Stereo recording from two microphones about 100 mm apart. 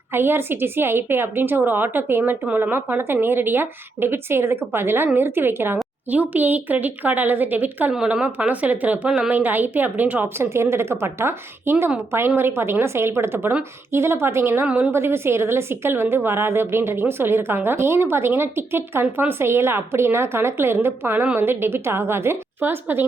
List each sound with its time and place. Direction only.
0.1 s a woman's voice: 25° right (ahead or behind)
14.7 s speech: 15° right (ahead or behind)
14.9 s a woman's voice: 25° right (ahead or behind)